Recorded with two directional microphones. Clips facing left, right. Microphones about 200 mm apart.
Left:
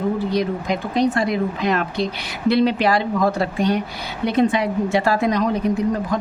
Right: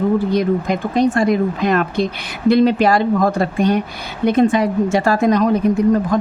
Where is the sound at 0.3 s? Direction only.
50° right (ahead or behind).